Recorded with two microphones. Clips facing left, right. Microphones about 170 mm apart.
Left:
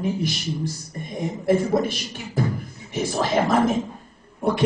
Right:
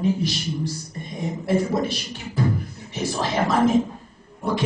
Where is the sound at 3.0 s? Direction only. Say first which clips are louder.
Left 2 dB; 50° left (ahead or behind).